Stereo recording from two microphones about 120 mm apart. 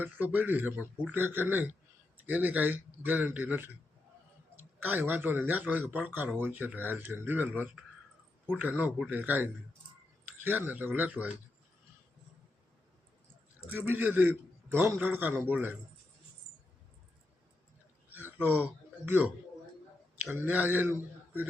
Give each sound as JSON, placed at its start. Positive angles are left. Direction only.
{"t": 0.0, "sound": "speech", "side_deg": -15}
{"t": 13.7, "sound": "a man's voice", "side_deg": -15}
{"t": 18.1, "sound": "a sound", "side_deg": -15}
{"t": 20.3, "sound": "speech", "side_deg": -15}